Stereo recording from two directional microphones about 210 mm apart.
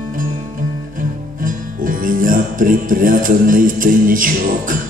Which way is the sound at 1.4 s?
40° right (ahead or behind).